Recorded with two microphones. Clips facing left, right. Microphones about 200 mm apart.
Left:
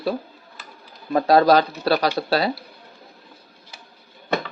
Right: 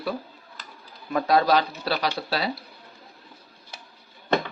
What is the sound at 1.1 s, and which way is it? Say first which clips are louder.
Speech: left 5 dB; 35° left (ahead or behind).